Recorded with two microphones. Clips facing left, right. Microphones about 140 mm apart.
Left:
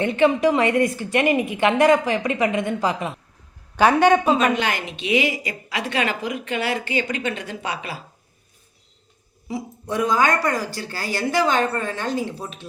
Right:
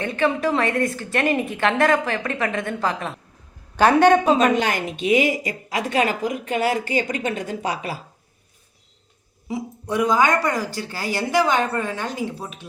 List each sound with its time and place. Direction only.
0.0 s a woman's voice: 20° left (ahead or behind)
4.4 s a woman's voice: 40° right (ahead or behind)
9.5 s speech: 15° right (ahead or behind)